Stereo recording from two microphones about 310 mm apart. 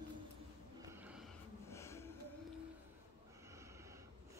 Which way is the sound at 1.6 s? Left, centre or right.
Centre.